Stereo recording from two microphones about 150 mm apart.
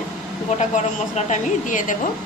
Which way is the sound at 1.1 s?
55° left (ahead or behind).